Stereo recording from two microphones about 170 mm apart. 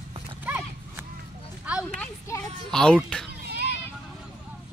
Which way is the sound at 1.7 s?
10° right (ahead or behind).